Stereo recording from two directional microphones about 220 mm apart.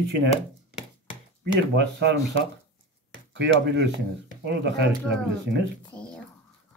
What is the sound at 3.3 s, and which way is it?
Speech, 50° right (ahead or behind).